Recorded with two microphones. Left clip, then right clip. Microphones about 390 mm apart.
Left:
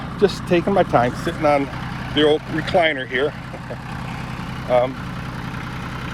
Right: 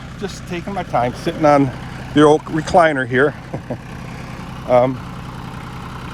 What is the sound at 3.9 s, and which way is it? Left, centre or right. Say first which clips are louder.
Vehicle: left 2 dB; centre.